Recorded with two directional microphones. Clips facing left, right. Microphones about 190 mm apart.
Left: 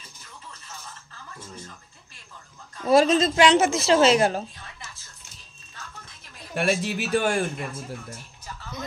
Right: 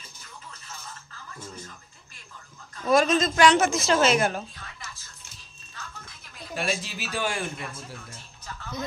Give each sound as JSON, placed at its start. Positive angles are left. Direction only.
{"t": 2.8, "sound": "a woman's voice", "side_deg": 30}
{"t": 6.5, "sound": "a man's voice", "side_deg": 60}